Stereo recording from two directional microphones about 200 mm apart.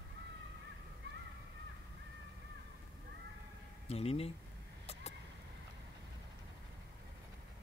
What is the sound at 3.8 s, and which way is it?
Speech, 30° left (ahead or behind).